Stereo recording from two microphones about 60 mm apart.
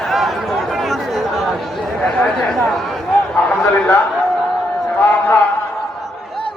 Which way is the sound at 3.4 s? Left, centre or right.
Left.